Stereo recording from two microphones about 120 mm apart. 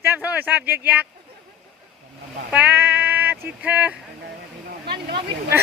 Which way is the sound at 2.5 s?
15° right (ahead or behind).